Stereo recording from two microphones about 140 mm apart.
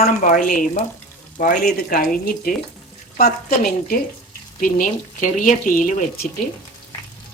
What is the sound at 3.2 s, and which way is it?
Speech, 85° left.